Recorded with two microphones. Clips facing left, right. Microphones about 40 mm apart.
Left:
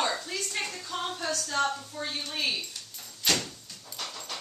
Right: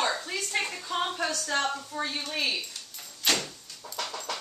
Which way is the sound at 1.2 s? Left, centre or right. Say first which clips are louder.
Right 1 dB; right.